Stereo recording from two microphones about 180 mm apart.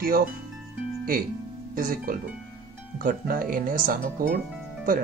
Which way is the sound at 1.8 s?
50° right (ahead or behind).